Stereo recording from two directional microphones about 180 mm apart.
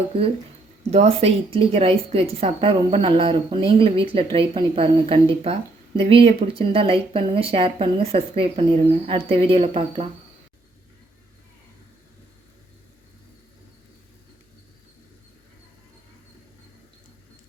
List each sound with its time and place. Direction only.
0.9 s speech: 35° right (ahead or behind)